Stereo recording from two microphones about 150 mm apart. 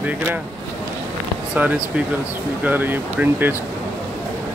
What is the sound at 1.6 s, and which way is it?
Speech, 10° right (ahead or behind).